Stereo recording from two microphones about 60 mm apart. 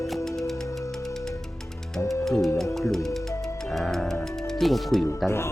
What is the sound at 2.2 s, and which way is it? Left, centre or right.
Speech, centre.